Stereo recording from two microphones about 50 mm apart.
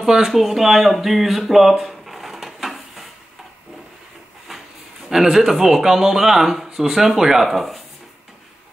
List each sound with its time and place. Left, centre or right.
0.0 s speech: centre
5.0 s speech: centre